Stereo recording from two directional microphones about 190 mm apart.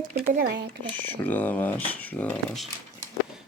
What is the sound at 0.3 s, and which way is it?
Speech, 55° right (ahead or behind).